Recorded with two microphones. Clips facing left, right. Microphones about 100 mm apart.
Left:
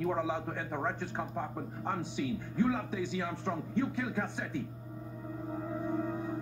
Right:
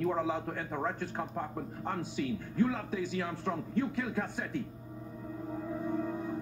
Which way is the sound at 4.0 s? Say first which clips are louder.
Even; 20° left (ahead or behind).